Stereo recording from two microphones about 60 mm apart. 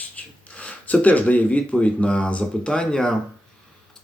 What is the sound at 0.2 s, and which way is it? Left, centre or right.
Speech, left.